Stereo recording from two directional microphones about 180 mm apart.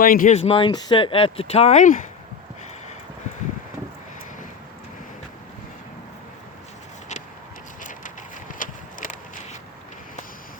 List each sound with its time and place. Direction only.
0.0 s speech: 50° left (ahead or behind)
0.3 s speech: 35° left (ahead or behind)
7.8 s a sound: 45° left (ahead or behind)